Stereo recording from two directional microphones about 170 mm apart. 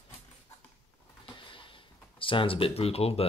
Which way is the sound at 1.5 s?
30° left (ahead or behind).